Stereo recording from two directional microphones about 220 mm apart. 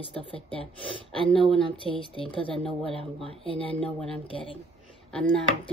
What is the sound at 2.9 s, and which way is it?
Speech, 25° right (ahead or behind).